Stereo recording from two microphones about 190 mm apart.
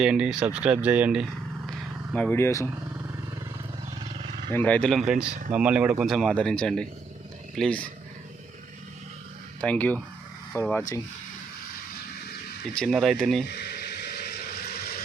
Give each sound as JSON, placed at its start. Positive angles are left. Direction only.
{"t": 0.0, "sound": "speech", "side_deg": -5}
{"t": 2.1, "sound": "speech", "side_deg": 10}
{"t": 4.0, "sound": "wild animals", "side_deg": -25}
{"t": 4.5, "sound": "speech", "side_deg": 10}
{"t": 9.6, "sound": "speech", "side_deg": 10}
{"t": 12.7, "sound": "speech", "side_deg": 0}
{"t": 13.5, "sound": "a sound", "side_deg": 60}